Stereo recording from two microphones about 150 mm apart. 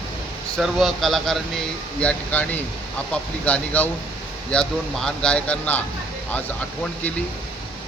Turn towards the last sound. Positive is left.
turn(degrees=10)  # may be behind; listen again after turning